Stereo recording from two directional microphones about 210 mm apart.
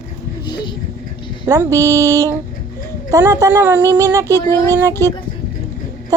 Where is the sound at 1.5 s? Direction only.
15° right (ahead or behind).